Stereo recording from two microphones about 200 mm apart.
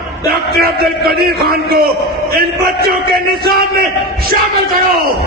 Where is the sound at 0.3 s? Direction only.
50° right (ahead or behind).